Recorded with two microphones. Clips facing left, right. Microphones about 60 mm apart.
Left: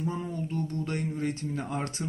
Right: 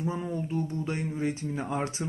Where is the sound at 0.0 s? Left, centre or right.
Centre.